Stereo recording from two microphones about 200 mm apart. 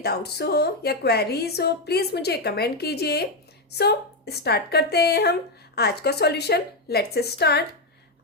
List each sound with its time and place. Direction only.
0.0 s a woman's voice: 55° left (ahead or behind)